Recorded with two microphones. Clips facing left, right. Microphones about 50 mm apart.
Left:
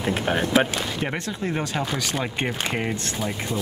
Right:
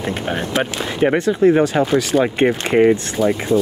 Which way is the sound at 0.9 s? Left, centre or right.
Right.